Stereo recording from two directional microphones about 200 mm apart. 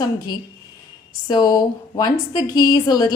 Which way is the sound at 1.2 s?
20° left (ahead or behind).